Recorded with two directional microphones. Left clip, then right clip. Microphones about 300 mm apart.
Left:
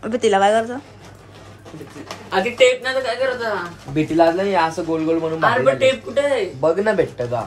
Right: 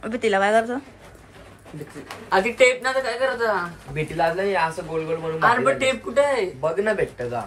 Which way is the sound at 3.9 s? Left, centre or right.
Left.